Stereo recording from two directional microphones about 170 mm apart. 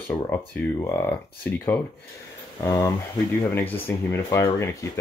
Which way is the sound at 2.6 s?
20° left (ahead or behind).